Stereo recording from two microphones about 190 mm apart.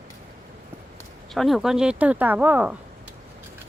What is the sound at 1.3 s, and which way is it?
Speech, centre (ahead or behind).